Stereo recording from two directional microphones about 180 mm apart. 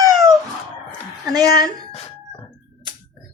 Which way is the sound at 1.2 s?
20° right (ahead or behind).